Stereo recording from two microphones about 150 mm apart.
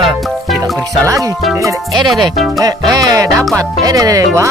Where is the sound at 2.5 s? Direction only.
25° right (ahead or behind).